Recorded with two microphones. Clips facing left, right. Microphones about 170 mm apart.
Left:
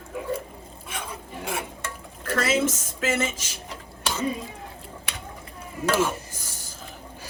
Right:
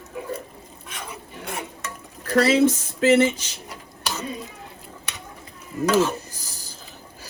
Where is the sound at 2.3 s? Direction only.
30° right (ahead or behind).